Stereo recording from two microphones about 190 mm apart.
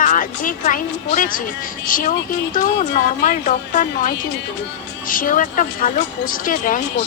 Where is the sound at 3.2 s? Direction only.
40° left (ahead or behind).